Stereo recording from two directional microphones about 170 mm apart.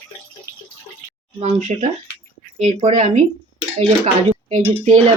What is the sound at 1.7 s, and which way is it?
Speech, 45° right (ahead or behind).